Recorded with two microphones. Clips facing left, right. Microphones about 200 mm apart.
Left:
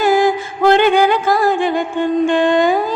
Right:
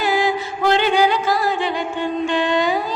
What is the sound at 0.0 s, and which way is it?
Music, 50° left (ahead or behind).